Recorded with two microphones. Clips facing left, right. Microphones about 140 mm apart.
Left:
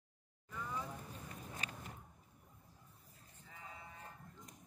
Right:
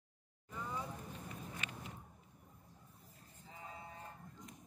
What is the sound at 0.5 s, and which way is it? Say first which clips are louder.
Vehicle: even; 20° right (ahead or behind).